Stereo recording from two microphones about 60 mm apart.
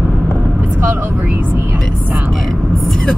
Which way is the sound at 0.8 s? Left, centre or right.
Right.